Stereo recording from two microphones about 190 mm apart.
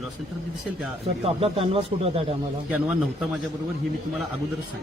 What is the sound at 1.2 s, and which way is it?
Speech, 30° right (ahead or behind).